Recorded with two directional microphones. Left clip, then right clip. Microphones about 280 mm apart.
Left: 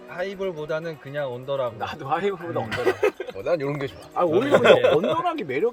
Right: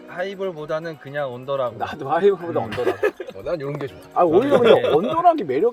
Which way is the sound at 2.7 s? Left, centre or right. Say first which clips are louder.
Left 2 dB; centre.